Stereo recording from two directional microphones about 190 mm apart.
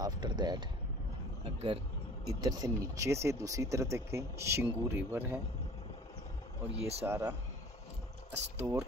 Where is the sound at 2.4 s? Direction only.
20° right (ahead or behind).